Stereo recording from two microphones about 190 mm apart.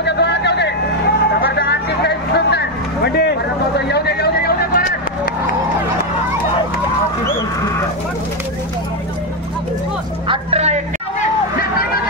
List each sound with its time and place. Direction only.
0.0 s vehicle: 65° left (ahead or behind)
10.2 s vehicle: 30° right (ahead or behind)